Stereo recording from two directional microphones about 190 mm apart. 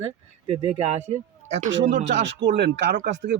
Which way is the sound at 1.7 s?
70° right (ahead or behind).